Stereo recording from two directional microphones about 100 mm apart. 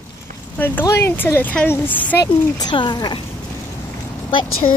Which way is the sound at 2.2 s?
45° left (ahead or behind).